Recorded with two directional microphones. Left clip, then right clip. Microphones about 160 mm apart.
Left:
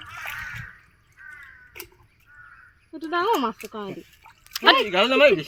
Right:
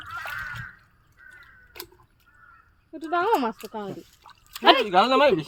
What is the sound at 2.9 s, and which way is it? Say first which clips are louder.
Speech: left 1 dB; 50° left (ahead or behind).